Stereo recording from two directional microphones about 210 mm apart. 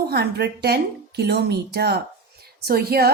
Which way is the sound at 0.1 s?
50° right (ahead or behind).